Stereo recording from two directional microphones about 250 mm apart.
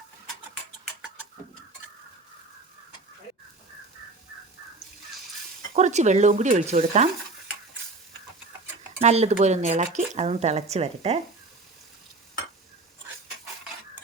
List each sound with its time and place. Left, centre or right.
5.7 s speech: right
9.0 s speech: right